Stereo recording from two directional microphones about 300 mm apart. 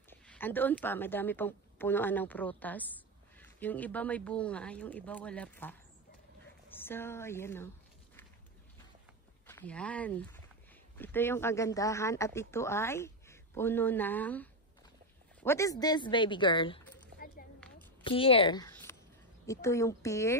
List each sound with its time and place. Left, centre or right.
0.1 s a woman's voice: centre
9.5 s speech: centre
17.1 s a sound: right
18.0 s speech: centre